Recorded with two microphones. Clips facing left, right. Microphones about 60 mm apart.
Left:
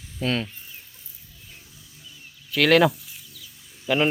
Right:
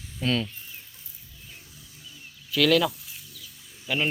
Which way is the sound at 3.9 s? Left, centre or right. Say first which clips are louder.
Left 6 dB; centre.